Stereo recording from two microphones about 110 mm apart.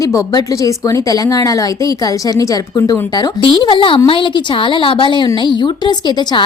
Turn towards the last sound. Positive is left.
turn(degrees=40)  # may be behind; listen again after turning